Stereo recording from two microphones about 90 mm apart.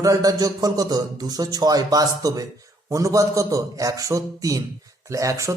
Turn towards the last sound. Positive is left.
turn(degrees=-35)  # may be behind; listen again after turning